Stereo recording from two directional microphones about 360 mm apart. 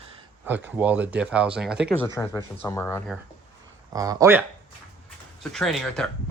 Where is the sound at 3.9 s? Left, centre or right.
Centre.